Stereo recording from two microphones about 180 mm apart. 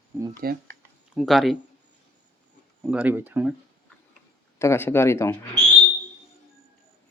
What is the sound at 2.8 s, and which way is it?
Speech, 5° right (ahead or behind).